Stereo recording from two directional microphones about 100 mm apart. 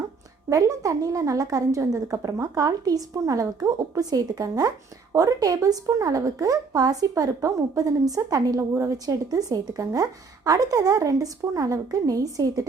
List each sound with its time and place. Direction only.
0.5 s a woman's voice: 35° right (ahead or behind)